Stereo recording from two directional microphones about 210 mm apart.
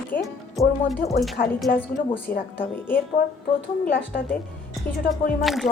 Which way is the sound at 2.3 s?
45° left (ahead or behind).